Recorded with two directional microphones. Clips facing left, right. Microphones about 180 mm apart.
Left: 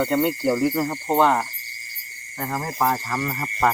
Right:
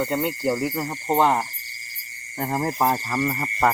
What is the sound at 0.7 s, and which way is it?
Cricket, 5° right (ahead or behind).